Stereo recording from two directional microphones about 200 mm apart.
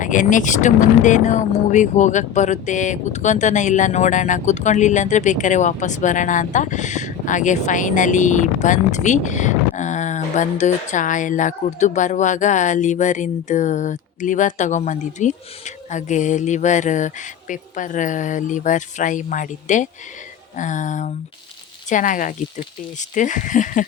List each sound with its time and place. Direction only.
0.0 s speech: 40° left (ahead or behind)